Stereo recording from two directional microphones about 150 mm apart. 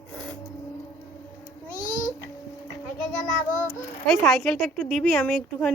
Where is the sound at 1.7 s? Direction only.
60° left (ahead or behind).